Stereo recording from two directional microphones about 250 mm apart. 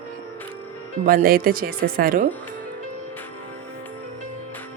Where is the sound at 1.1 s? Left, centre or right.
Right.